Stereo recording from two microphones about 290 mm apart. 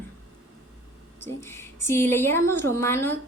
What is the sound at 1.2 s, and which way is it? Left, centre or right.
A woman's voice, centre.